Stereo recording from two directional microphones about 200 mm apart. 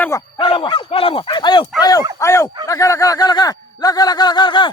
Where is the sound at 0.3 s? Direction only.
25° left (ahead or behind).